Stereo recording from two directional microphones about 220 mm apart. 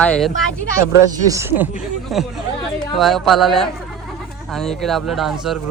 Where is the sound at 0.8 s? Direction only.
15° right (ahead or behind).